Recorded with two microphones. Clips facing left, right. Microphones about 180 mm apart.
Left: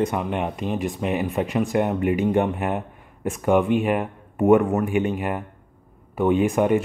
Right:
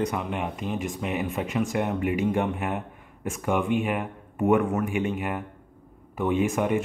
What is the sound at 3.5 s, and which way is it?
Speech, 40° left (ahead or behind).